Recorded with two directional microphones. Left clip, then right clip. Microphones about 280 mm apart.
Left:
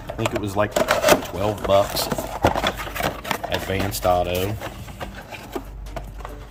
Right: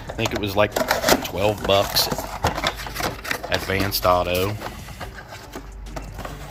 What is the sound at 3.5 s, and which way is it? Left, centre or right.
Speech, centre.